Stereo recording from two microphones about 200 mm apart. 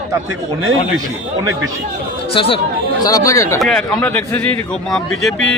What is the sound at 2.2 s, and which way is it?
Speech, 30° left (ahead or behind).